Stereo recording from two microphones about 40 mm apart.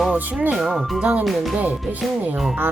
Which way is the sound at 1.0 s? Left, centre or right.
Right.